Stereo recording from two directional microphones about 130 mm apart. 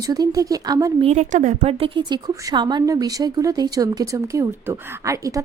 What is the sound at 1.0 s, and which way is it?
A woman's voice, 60° right (ahead or behind).